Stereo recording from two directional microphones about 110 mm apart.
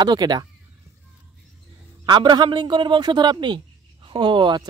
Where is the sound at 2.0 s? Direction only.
45° right (ahead or behind).